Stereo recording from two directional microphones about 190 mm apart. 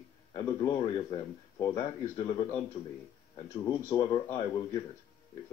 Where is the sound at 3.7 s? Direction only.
15° left (ahead or behind).